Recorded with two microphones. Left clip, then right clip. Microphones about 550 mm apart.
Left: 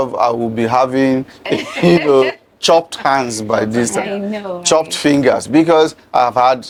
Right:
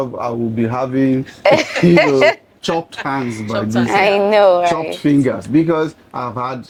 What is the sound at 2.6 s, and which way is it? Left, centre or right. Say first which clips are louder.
Speech: left 8 dB; left.